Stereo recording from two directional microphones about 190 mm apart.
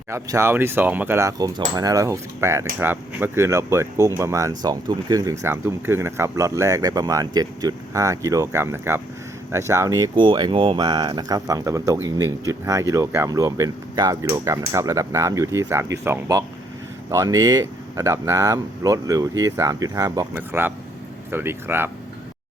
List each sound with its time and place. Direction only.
0.1 s speech: 15° right (ahead or behind)